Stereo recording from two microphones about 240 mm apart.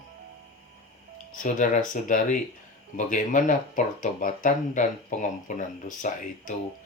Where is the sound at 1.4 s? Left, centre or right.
Left.